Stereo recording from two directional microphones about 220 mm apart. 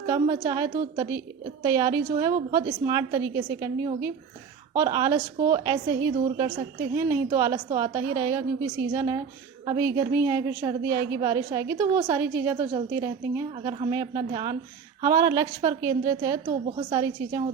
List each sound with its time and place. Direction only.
0.1 s a woman's voice: 15° right (ahead or behind)
16.5 s a woman's voice: 30° right (ahead or behind)
16.9 s a woman's voice: 15° right (ahead or behind)